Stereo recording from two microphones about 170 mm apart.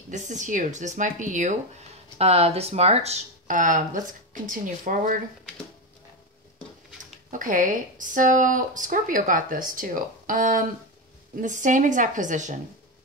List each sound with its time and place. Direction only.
0.1 s speech: 45° right (ahead or behind)
7.2 s speech: 50° right (ahead or behind)